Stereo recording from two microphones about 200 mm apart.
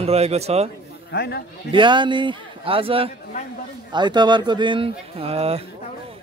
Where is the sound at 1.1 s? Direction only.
55° left (ahead or behind).